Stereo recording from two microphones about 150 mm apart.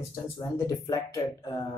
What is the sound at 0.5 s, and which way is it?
Speech, 20° left (ahead or behind).